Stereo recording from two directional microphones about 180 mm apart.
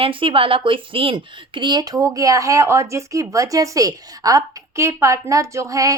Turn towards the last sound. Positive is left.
turn(degrees=-20)  # may be behind; listen again after turning